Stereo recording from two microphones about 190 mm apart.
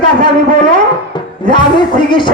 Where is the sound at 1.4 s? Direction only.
25° left (ahead or behind).